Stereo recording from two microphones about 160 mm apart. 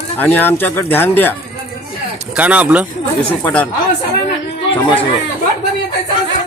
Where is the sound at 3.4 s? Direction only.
10° left (ahead or behind).